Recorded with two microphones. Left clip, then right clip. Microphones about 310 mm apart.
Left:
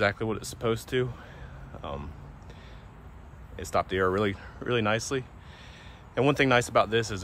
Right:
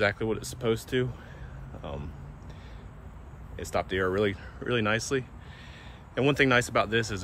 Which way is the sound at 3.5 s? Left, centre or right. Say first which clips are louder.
Left 2 dB; left.